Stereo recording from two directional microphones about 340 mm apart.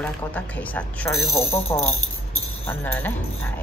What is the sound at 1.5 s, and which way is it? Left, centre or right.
Speech, centre.